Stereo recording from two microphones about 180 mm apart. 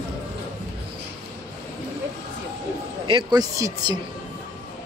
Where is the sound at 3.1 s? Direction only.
25° right (ahead or behind).